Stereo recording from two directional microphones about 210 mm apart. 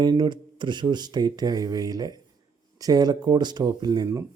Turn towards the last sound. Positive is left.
turn(degrees=-15)  # may be behind; listen again after turning